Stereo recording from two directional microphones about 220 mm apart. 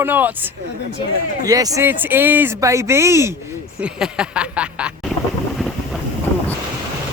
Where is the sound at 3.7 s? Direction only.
5° right (ahead or behind).